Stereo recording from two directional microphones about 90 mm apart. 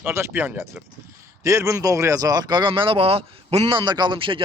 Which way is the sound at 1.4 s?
35° right (ahead or behind).